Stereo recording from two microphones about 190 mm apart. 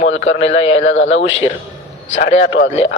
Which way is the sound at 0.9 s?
90° left.